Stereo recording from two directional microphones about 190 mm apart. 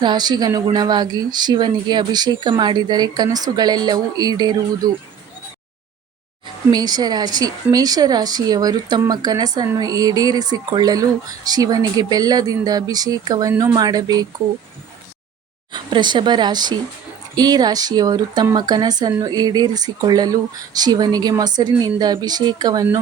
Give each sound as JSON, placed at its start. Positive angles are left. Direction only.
{"t": 0.0, "sound": "speech", "side_deg": -20}
{"t": 6.7, "sound": "speech", "side_deg": -20}
{"t": 15.7, "sound": "speech", "side_deg": -25}